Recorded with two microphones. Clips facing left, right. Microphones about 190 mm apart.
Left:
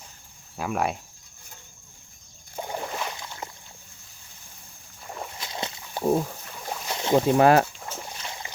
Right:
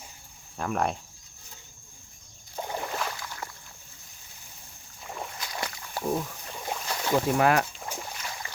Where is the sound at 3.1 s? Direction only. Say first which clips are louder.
Left 1 dB; 20° left (ahead or behind).